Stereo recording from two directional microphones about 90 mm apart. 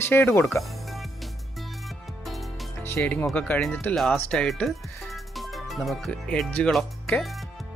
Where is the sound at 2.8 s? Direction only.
20° left (ahead or behind).